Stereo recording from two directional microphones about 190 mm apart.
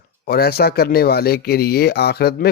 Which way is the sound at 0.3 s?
55° left (ahead or behind).